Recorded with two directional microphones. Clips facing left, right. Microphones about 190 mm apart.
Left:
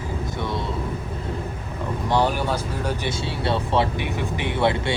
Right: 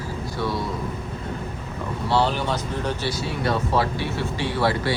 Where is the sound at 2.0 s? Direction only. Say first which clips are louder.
Even; 15° left (ahead or behind).